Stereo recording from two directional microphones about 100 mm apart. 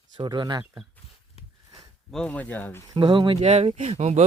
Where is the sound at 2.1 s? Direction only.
10° left (ahead or behind).